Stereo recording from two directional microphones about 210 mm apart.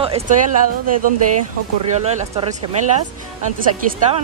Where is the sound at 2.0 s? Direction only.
30° right (ahead or behind).